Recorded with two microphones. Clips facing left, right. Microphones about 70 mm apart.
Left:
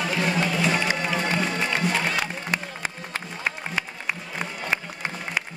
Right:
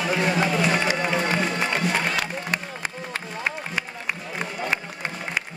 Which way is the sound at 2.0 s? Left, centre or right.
Centre.